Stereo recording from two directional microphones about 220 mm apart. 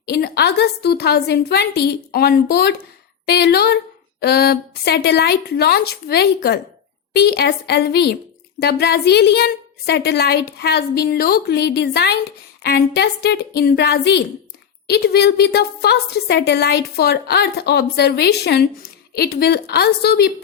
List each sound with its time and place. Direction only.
0.0 s a woman's voice: 45° left (ahead or behind)